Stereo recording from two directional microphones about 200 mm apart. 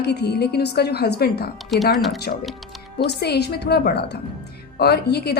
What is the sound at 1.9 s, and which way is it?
Speech, centre (ahead or behind).